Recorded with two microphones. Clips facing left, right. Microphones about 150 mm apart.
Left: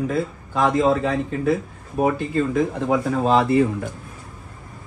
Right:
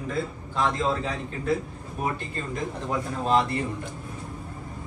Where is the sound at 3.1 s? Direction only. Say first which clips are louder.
Left 5 dB; 90° left.